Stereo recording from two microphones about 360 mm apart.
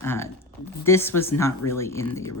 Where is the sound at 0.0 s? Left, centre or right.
Centre.